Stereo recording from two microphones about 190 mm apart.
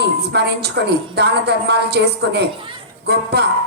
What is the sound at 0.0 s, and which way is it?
A woman's voice, 60° right (ahead or behind).